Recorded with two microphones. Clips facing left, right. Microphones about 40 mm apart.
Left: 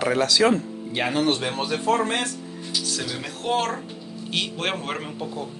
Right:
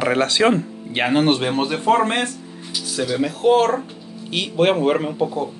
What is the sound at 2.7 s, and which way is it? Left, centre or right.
Speech, centre.